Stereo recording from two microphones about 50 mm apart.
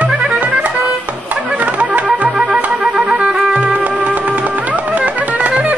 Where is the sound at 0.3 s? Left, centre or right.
Right.